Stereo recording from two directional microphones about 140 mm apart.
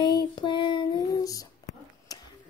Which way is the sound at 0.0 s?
35° left (ahead or behind).